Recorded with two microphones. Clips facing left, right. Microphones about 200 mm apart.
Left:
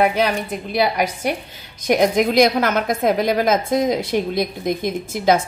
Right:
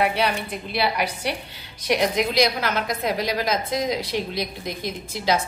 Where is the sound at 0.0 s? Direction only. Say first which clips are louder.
Left 5 dB; 45° left (ahead or behind).